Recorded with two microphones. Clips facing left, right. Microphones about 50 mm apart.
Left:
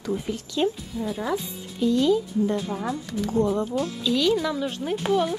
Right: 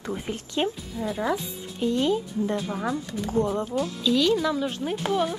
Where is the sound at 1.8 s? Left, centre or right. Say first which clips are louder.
Left 3 dB; right.